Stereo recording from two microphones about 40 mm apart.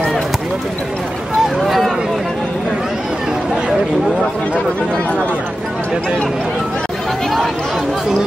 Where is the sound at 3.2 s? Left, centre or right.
Centre.